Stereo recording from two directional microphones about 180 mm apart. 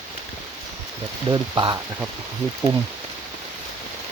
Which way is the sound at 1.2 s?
25° right (ahead or behind).